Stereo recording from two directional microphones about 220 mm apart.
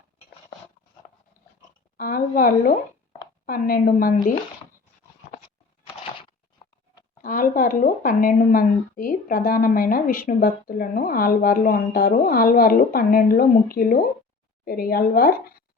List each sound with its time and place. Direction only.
2.0 s a woman's voice: 40° left (ahead or behind)
7.2 s speech: 40° left (ahead or behind)